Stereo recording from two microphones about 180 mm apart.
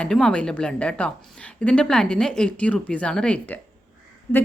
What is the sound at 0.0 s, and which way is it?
A woman's voice, 5° left (ahead or behind).